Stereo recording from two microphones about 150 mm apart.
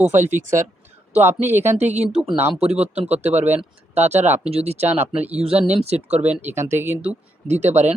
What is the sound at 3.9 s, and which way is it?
Speech, 50° right (ahead or behind).